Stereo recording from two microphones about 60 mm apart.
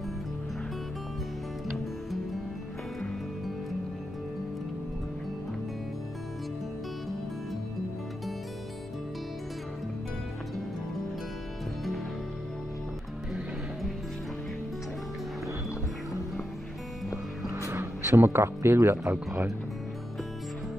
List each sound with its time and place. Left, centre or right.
17.5 s music: right
17.7 s speech: right